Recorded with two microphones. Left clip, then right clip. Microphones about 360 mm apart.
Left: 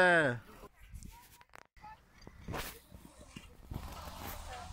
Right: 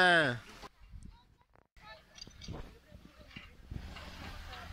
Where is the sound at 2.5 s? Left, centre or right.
Left.